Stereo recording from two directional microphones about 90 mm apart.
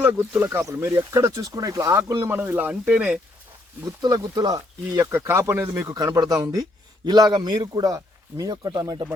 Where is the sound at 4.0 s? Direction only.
45° right (ahead or behind).